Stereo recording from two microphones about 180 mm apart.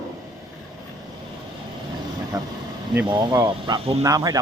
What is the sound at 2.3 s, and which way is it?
Vehicle, 20° right (ahead or behind).